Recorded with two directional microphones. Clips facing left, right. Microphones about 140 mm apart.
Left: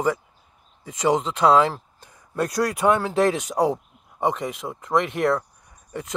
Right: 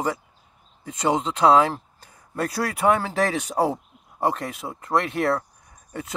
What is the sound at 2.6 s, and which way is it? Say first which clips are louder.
Speech: left 1 dB; 5° right (ahead or behind).